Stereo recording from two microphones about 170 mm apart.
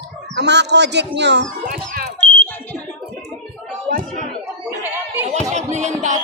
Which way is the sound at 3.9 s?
55° right (ahead or behind).